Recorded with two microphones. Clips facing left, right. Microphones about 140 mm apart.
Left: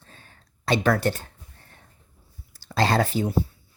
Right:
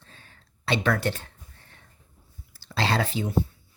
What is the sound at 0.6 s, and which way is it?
Speech, 40° left (ahead or behind).